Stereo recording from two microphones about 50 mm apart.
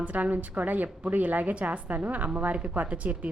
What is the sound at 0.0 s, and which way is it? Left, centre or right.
A woman's voice, right.